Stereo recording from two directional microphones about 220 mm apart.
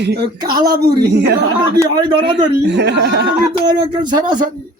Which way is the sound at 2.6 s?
50° right (ahead or behind).